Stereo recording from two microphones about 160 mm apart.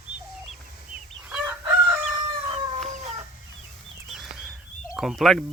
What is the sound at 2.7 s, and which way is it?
Chicken, 45° right (ahead or behind).